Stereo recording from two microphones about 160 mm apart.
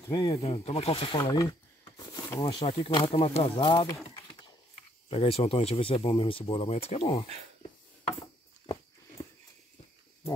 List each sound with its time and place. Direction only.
0.1 s speech: 25° left (ahead or behind)
0.4 s speech: 40° left (ahead or behind)
1.1 s a sound: 20° left (ahead or behind)
2.6 s speech: 30° left (ahead or behind)
5.1 s speech: 35° left (ahead or behind)